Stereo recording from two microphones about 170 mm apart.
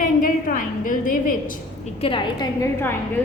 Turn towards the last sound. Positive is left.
turn(degrees=15)  # may be behind; listen again after turning